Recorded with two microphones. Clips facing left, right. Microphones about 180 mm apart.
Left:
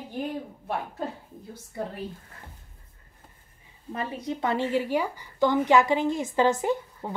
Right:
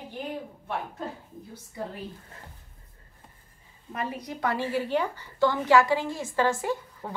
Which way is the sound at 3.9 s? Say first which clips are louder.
Left 2 dB; 30° left (ahead or behind).